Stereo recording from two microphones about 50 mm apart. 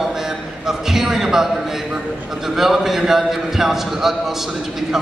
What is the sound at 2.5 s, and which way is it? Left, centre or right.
A man's voice, centre.